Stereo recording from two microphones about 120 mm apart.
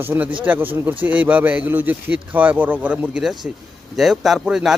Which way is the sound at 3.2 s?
Centre (ahead or behind).